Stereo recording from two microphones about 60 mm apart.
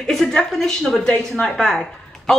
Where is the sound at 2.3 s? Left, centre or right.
Centre.